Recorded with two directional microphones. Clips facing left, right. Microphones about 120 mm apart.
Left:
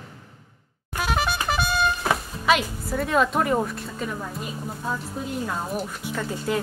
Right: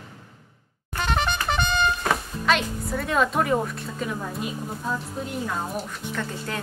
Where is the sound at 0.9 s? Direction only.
5° left (ahead or behind).